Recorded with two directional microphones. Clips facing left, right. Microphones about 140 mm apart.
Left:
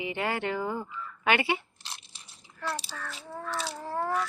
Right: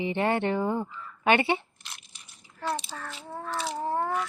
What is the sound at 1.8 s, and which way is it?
Crunch, 30° left (ahead or behind).